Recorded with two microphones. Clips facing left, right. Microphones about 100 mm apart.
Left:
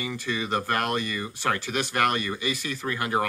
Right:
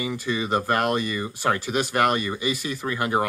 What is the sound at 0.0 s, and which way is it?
Speech, 10° right (ahead or behind).